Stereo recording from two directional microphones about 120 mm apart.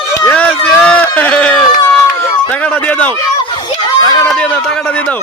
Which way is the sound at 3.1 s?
35° left (ahead or behind).